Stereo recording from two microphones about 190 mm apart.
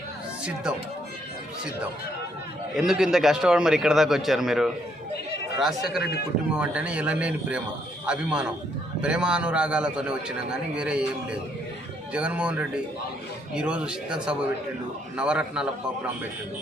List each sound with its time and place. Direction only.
2.7 s a man's voice: centre (ahead or behind)
6.0 s speech: 55° left (ahead or behind)
6.6 s a man's voice: 5° right (ahead or behind)